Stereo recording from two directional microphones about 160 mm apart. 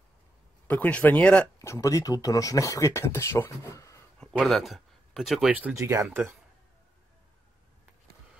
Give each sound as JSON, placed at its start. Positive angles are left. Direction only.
{"t": 0.7, "sound": "speech", "side_deg": 10}
{"t": 1.6, "sound": "speech", "side_deg": 20}
{"t": 4.2, "sound": "speech", "side_deg": 0}
{"t": 5.8, "sound": "speech", "side_deg": -20}